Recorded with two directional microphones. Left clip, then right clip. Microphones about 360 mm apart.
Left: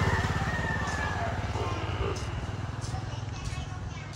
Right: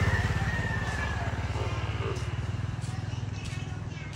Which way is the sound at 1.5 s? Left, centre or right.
Left.